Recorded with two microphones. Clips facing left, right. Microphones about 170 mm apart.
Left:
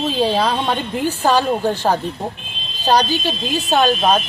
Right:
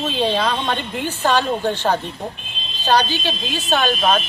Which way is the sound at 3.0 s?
40° left (ahead or behind).